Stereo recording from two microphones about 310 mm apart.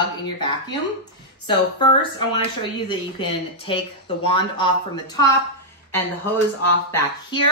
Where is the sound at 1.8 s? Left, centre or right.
Centre.